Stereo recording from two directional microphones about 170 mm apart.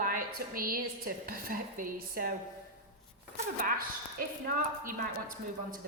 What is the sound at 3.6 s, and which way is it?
A woman's voice, 55° right (ahead or behind).